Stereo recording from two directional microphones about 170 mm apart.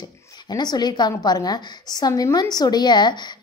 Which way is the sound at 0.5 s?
25° left (ahead or behind).